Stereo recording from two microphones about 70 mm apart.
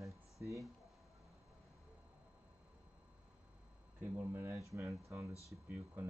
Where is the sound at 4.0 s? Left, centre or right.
Right.